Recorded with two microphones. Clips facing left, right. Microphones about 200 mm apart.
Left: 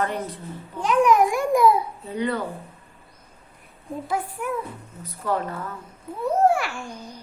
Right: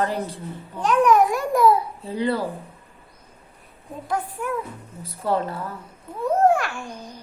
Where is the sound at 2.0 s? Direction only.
30° right (ahead or behind).